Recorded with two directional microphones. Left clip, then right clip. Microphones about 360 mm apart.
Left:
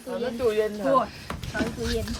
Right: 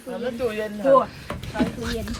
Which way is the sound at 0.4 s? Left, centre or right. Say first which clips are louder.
Left 4 dB; left.